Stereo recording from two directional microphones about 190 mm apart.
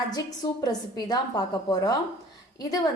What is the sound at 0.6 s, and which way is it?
A woman's voice, 20° left (ahead or behind).